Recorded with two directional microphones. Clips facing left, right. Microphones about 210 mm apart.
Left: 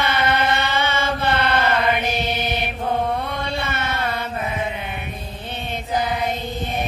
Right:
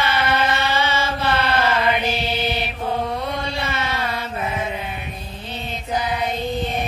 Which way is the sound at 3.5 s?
55° left (ahead or behind).